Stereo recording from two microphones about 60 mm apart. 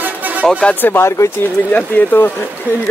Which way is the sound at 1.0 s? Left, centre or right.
Left.